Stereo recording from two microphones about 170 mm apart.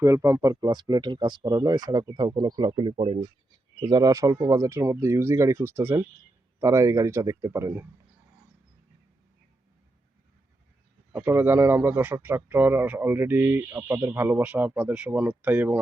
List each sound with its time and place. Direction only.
0.0 s speech: 20° right (ahead or behind); by 3.2 s 35° right (ahead or behind)
3.8 s speech: 25° right (ahead or behind)
11.1 s speech: 10° right (ahead or behind)